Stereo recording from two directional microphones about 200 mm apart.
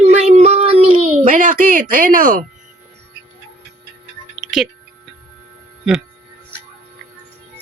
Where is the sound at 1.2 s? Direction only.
40° right (ahead or behind).